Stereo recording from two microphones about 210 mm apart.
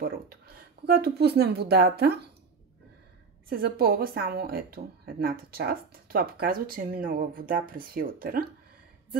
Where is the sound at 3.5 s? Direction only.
45° right (ahead or behind).